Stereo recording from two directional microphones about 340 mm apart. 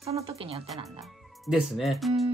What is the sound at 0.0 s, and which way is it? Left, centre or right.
Speech, centre.